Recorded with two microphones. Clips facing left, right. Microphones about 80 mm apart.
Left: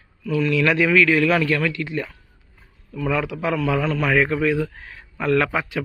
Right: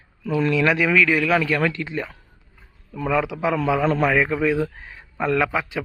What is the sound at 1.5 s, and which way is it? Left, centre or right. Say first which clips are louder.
A man's voice: even; right.